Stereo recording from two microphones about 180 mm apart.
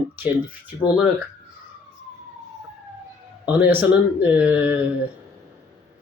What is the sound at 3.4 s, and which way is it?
Speech, 10° right (ahead or behind).